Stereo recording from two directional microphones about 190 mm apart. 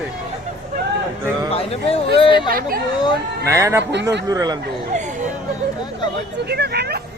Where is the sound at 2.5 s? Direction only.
50° right (ahead or behind).